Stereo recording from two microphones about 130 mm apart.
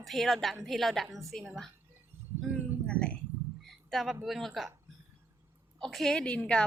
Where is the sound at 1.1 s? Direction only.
25° right (ahead or behind).